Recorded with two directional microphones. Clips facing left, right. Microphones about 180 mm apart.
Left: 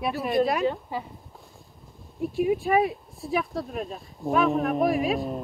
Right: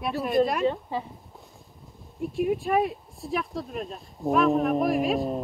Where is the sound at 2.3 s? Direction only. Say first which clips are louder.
Left 2 dB; centre (ahead or behind).